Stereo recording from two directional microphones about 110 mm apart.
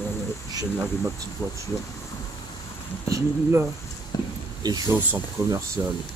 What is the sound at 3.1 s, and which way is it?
Speech, 30° right (ahead or behind).